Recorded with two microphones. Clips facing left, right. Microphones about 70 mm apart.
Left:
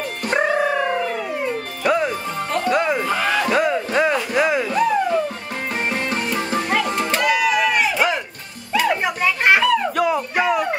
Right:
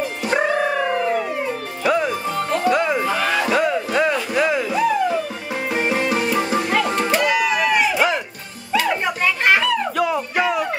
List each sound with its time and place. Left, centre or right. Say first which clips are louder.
0.2 s dog: left 1 dB; centre
1.8 s music: even; centre
7.3 s a sound: even; centre
8.8 s music: left 4 dB; centre
9.2 s children playing: left 1 dB; centre